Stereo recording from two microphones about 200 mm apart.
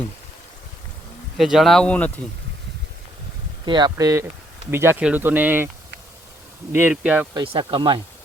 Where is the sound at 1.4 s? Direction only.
Centre (ahead or behind).